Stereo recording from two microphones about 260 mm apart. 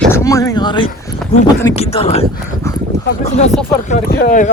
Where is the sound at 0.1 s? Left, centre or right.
Centre.